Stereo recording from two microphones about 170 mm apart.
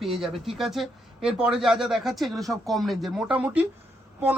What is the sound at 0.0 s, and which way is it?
A man's voice, centre (ahead or behind).